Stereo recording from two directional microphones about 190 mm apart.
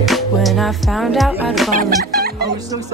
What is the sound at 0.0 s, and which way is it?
Music, centre (ahead or behind).